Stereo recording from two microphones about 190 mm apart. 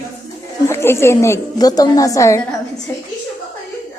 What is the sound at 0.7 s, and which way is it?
A woman's voice, 15° left (ahead or behind).